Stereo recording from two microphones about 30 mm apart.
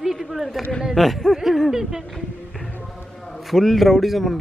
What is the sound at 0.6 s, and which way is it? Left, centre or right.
Speech, left.